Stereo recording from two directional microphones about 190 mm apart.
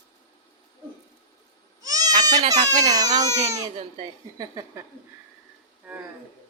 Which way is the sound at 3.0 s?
20° right (ahead or behind).